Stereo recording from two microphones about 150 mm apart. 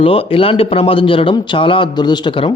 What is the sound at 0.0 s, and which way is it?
Speech, 40° left (ahead or behind).